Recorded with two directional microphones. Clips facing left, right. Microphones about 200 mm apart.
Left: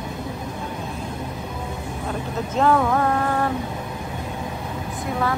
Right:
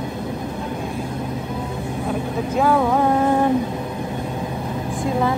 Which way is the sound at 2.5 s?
10° right (ahead or behind).